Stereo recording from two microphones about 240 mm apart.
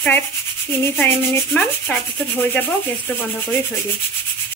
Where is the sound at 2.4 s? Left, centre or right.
Centre.